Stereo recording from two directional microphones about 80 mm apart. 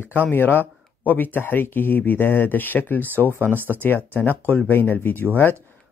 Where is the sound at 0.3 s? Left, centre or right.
Left.